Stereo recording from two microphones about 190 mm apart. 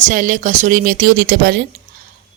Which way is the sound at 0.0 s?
45° right (ahead or behind).